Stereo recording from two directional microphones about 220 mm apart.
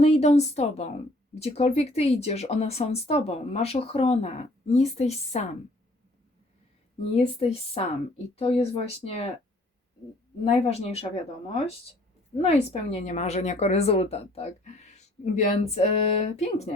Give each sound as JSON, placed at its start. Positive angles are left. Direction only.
{"t": 0.0, "sound": "speech", "side_deg": 30}
{"t": 7.2, "sound": "speech", "side_deg": 25}
{"t": 10.4, "sound": "speech", "side_deg": 25}